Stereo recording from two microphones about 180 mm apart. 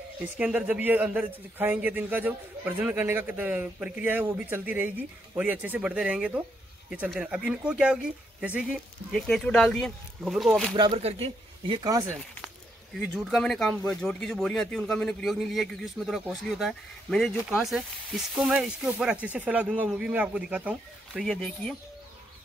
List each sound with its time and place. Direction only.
0.2 s a man's voice: 5° right (ahead or behind)
10.8 s speech: 30° right (ahead or behind)
13.0 s speech: centre (ahead or behind)